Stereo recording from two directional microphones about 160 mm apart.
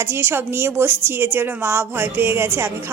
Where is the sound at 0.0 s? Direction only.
15° right (ahead or behind).